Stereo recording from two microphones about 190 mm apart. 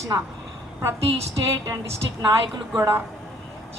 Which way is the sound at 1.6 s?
15° right (ahead or behind).